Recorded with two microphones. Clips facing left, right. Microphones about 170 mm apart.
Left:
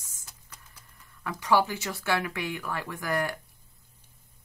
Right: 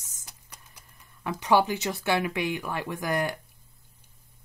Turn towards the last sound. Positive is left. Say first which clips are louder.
# right 2 dB
turn(degrees=-20)  # may be behind; listen again after turning